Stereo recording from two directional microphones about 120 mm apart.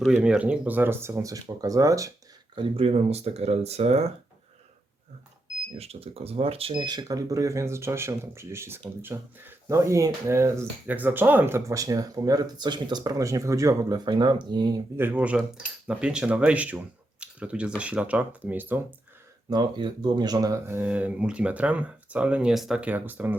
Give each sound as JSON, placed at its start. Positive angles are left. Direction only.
{"t": 0.0, "sound": "speech", "side_deg": -10}
{"t": 1.1, "sound": "speech", "side_deg": -30}
{"t": 2.6, "sound": "speech", "side_deg": -50}
{"t": 5.7, "sound": "speech", "side_deg": -55}
{"t": 14.9, "sound": "speech", "side_deg": -15}
{"t": 19.5, "sound": "speech", "side_deg": -40}
{"t": 20.7, "sound": "speech", "side_deg": -15}